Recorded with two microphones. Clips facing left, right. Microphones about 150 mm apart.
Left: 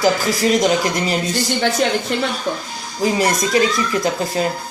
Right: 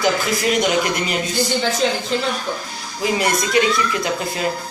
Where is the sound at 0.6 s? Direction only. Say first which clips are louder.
Left 2 dB; 35° left (ahead or behind).